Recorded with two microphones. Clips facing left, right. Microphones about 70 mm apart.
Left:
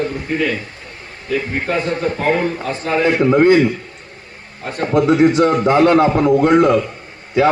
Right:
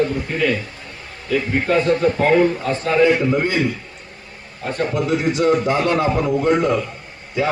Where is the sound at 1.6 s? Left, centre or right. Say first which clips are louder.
Right 3 dB; centre.